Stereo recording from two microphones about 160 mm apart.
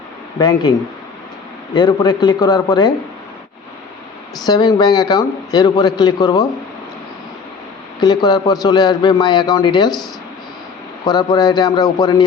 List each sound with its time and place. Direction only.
0.3 s a man's voice: 25° left (ahead or behind)
1.7 s a man's voice: 25° left (ahead or behind)
4.4 s a man's voice: 25° left (ahead or behind)
8.0 s a man's voice: 25° left (ahead or behind)
11.0 s a man's voice: 25° left (ahead or behind)